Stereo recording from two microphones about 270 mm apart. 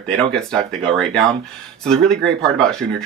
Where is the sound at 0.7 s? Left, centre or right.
Centre.